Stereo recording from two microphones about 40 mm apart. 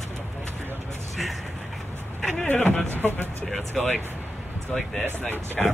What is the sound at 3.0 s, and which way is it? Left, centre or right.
Speech, left.